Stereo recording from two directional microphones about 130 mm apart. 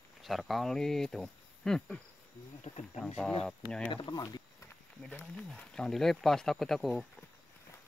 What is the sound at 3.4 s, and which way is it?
Speech, 5° left (ahead or behind).